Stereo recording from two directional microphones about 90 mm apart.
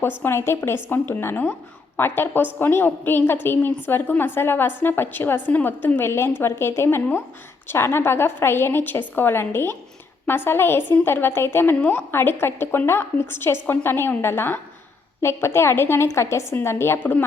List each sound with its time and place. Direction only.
0.2 s a woman's voice: 30° left (ahead or behind)